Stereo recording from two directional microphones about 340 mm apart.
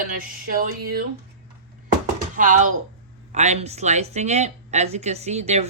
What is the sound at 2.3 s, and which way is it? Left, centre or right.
A woman's voice, right.